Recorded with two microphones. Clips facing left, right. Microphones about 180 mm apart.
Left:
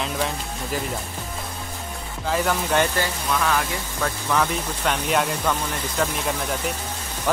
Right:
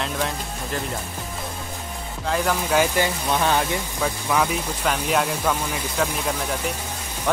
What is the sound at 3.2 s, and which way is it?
Speech, 30° right (ahead or behind).